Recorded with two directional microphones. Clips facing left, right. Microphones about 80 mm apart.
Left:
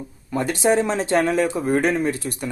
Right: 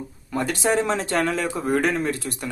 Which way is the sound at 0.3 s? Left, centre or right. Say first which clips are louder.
Left 3 dB; left.